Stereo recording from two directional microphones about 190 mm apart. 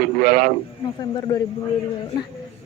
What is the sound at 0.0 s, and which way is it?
Speech, 50° right (ahead or behind).